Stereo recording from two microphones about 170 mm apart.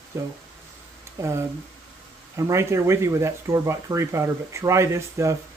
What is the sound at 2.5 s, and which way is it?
Speech, 15° right (ahead or behind).